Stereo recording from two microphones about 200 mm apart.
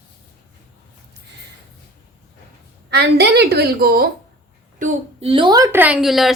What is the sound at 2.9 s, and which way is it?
A woman's voice, 55° right (ahead or behind).